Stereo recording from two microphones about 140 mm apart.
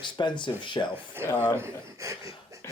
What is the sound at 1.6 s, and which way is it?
Speech, 20° right (ahead or behind).